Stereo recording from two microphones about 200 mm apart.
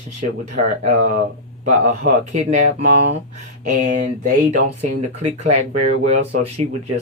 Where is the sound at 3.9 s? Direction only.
40° right (ahead or behind).